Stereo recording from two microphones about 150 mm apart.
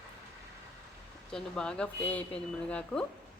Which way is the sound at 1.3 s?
5° left (ahead or behind).